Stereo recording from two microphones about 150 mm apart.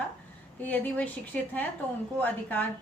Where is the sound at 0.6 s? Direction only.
10° left (ahead or behind).